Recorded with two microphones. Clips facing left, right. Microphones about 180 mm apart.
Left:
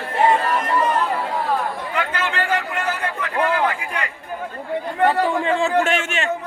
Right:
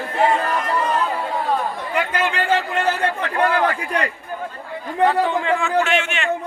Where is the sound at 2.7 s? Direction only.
30° right (ahead or behind).